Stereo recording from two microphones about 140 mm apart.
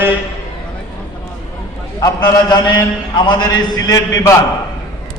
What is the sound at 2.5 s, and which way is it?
Mantra, 30° left (ahead or behind).